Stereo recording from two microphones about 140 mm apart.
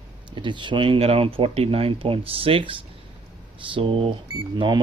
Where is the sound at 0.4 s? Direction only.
35° right (ahead or behind).